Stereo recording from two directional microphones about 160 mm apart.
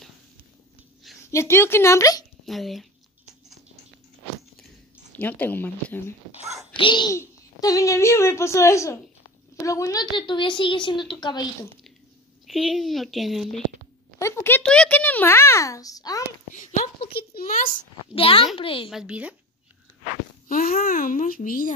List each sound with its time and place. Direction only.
1.3 s a child's voice: 15° left (ahead or behind)
2.4 s speech: centre (ahead or behind)
5.1 s a child's voice: 10° left (ahead or behind)
6.7 s a child's voice: 30° left (ahead or behind)
12.4 s speech: centre (ahead or behind)
14.2 s a child's voice: 15° left (ahead or behind)
16.5 s a woman's voice: 50° left (ahead or behind)
17.1 s speech: 70° left (ahead or behind)
18.1 s a child's voice: 35° left (ahead or behind)
18.9 s a woman's voice: 5° right (ahead or behind)
20.4 s a child's voice: 65° left (ahead or behind)